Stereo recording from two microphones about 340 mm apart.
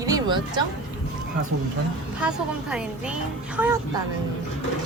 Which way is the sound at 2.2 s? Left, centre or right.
Centre.